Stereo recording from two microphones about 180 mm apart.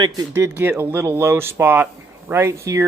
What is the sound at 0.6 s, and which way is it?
Speech, 15° right (ahead or behind).